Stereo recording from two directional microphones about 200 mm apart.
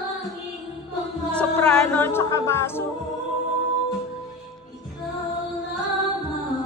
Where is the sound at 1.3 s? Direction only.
5° left (ahead or behind).